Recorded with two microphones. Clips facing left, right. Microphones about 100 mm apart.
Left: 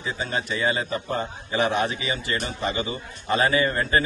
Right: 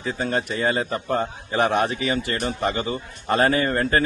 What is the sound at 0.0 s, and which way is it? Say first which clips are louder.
A man's voice: right 4 dB; 50° right (ahead or behind).